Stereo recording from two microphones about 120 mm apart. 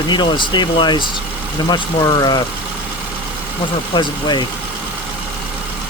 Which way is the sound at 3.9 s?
40° left (ahead or behind).